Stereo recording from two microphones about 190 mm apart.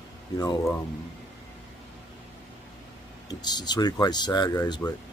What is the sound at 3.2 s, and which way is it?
Speech, 20° left (ahead or behind).